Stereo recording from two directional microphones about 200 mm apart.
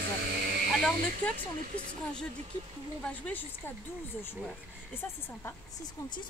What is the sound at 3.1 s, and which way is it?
Speech, 10° left (ahead or behind).